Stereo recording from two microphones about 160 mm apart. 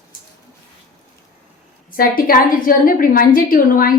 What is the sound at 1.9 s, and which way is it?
A woman's voice, 65° left (ahead or behind).